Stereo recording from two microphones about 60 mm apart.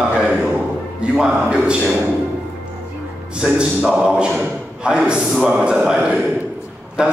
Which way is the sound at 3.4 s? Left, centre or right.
Centre.